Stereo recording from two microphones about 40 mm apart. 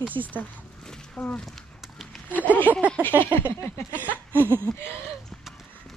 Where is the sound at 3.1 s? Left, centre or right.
Right.